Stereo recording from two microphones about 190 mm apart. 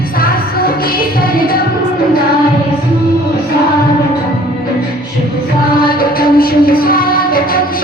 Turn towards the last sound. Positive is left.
turn(degrees=50)  # may be behind; listen again after turning